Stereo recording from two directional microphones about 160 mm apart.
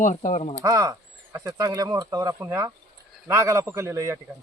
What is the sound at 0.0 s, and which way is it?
Speech, 50° left (ahead or behind).